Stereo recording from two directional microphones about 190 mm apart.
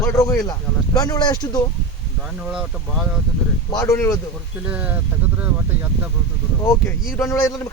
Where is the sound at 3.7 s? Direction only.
15° left (ahead or behind).